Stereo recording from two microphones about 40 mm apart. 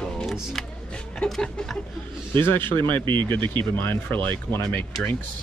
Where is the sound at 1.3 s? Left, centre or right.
Centre.